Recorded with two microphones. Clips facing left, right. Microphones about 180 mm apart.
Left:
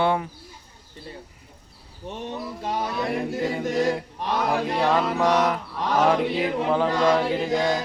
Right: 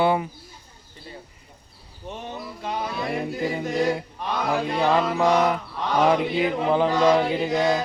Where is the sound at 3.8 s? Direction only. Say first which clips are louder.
Right 1 dB; centre (ahead or behind).